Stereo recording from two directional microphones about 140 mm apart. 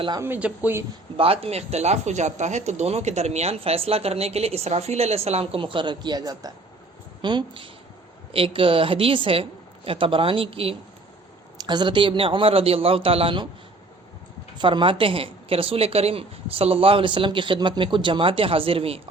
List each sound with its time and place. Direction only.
0.2 s speech: 10° right (ahead or behind)
1.1 s a woman's voice: 40° right (ahead or behind)
11.5 s a woman's voice: 30° right (ahead or behind)
14.6 s a woman's voice: 35° right (ahead or behind)